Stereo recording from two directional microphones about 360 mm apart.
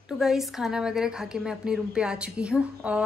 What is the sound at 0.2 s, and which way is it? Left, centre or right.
A woman's voice, centre.